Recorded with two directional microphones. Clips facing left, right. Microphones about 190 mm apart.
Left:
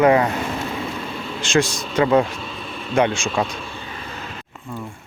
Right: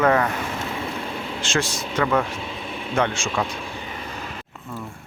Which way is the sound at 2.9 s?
15° left (ahead or behind).